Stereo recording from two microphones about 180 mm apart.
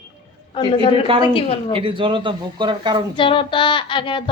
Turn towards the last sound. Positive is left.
turn(degrees=30)  # may be behind; listen again after turning